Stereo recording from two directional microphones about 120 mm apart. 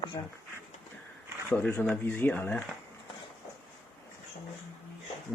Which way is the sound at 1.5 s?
15° left (ahead or behind).